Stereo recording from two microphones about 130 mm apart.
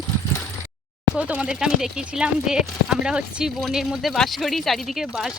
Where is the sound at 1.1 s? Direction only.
10° right (ahead or behind).